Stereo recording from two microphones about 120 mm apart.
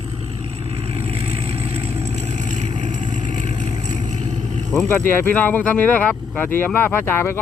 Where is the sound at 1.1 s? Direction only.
60° right (ahead or behind); by 4.0 s 90° right.